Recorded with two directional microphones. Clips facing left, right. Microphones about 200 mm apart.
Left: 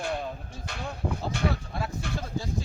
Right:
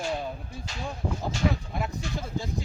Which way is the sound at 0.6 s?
60° left (ahead or behind).